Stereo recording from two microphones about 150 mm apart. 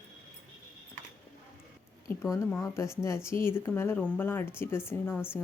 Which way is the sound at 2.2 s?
15° left (ahead or behind).